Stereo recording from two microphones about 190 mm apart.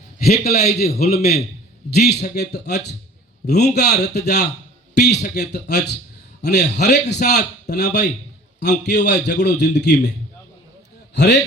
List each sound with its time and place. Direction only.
0.3 s a man's voice: 55° left (ahead or behind)
11.1 s a man's voice: 65° left (ahead or behind)